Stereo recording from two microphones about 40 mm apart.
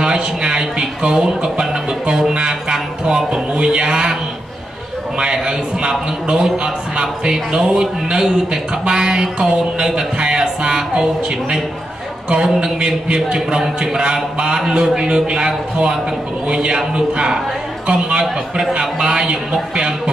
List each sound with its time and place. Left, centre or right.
0.0 s speech: centre
2.3 s music: right
3.5 s a man's voice: right
5.2 s a man's voice: centre
12.3 s a man's voice: centre